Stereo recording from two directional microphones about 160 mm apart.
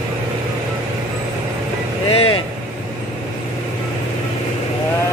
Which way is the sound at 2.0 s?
40° left (ahead or behind).